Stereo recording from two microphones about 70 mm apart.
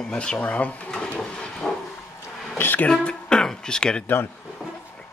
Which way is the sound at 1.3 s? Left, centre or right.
Centre.